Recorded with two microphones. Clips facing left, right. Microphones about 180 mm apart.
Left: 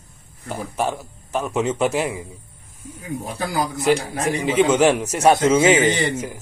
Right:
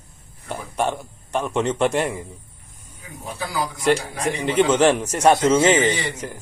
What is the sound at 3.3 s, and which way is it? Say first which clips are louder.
Speech: left 2 dB; 45° left (ahead or behind).